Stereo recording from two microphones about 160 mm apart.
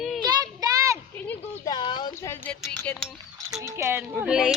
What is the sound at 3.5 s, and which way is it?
Speech, 20° right (ahead or behind).